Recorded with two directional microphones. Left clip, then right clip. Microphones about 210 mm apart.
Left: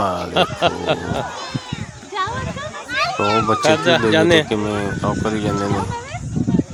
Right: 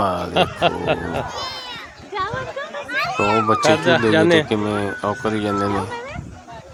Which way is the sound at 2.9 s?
35° left (ahead or behind).